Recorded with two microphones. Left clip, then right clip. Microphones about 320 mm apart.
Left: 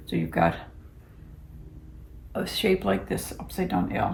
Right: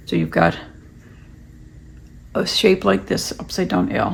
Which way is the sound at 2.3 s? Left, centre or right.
Centre.